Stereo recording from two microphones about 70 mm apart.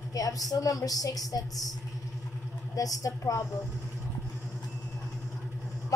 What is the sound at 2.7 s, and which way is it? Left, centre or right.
Speech, left.